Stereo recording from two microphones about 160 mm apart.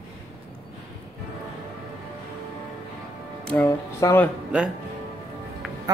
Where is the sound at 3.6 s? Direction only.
15° left (ahead or behind).